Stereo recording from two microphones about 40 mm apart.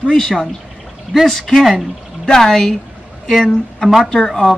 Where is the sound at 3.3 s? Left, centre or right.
Centre.